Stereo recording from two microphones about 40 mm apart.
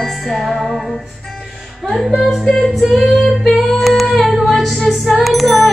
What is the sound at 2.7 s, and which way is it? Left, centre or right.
Female singing, centre.